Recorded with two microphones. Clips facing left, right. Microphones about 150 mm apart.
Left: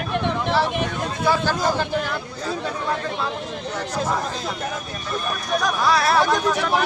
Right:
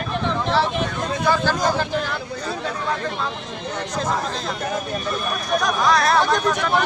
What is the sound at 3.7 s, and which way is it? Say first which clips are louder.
Speech: even; 5° left (ahead or behind).